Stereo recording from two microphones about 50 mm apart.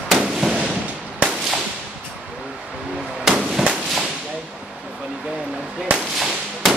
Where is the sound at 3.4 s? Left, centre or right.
Centre.